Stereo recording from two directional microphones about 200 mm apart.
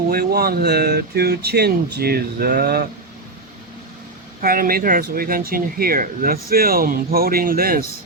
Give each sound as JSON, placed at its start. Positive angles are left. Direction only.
{"t": 0.1, "sound": "speech", "side_deg": -50}
{"t": 4.4, "sound": "speech", "side_deg": -45}